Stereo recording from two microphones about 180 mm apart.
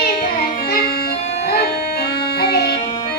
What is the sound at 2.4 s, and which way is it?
Music, 65° left (ahead or behind).